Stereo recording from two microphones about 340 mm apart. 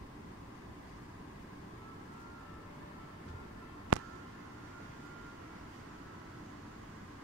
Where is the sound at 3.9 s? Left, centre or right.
Right.